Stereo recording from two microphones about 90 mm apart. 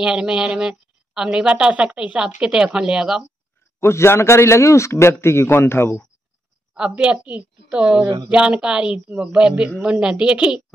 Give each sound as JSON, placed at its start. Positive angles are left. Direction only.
{"t": 0.0, "sound": "a woman's voice", "side_deg": -10}
{"t": 3.8, "sound": "speech", "side_deg": 30}
{"t": 6.7, "sound": "a woman's voice", "side_deg": -10}